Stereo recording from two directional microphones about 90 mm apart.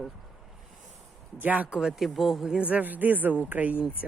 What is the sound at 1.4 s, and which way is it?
Speech, 15° right (ahead or behind).